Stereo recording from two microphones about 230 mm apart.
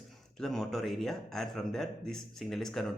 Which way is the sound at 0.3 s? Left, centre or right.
Centre.